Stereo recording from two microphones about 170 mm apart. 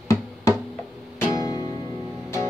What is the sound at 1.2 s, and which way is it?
Music, 20° left (ahead or behind).